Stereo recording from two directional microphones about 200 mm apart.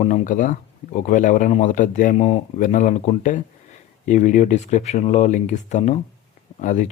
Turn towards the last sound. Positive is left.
turn(degrees=40)  # may be behind; listen again after turning